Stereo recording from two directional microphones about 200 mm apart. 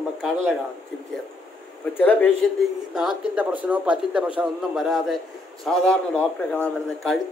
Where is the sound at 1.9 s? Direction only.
10° left (ahead or behind).